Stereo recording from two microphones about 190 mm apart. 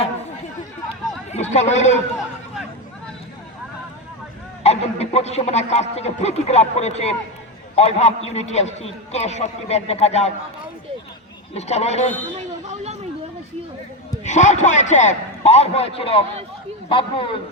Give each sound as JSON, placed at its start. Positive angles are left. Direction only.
{"t": 1.3, "sound": "speech", "side_deg": 35}
{"t": 4.6, "sound": "speech", "side_deg": 35}
{"t": 11.5, "sound": "speech", "side_deg": 35}
{"t": 12.6, "sound": "a sound", "side_deg": -35}
{"t": 14.3, "sound": "speech", "side_deg": 40}